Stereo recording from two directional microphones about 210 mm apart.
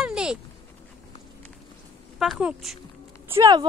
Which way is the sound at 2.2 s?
5° right (ahead or behind).